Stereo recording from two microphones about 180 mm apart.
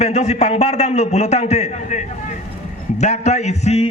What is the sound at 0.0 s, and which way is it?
A man's voice, 35° left (ahead or behind).